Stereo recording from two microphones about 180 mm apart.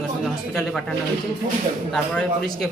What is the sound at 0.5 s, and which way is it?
Speech, centre (ahead or behind).